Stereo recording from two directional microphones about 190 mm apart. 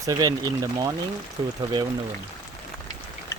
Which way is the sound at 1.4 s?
20° right (ahead or behind).